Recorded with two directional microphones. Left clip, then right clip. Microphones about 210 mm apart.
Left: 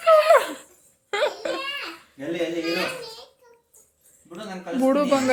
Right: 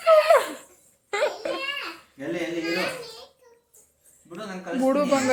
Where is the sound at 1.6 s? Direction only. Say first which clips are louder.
Even; centre (ahead or behind).